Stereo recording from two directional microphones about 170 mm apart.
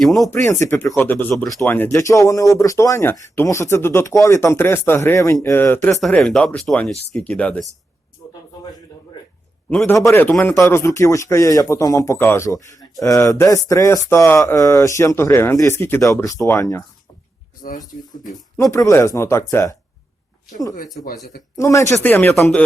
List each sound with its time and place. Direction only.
0.0 s speech: centre (ahead or behind)
0.4 s speech: 20° left (ahead or behind)
6.0 s speech: centre (ahead or behind)
9.6 s speech: 10° left (ahead or behind)
17.6 s speech: 55° left (ahead or behind)
18.5 s speech: 20° left (ahead or behind)
21.6 s speech: 15° left (ahead or behind)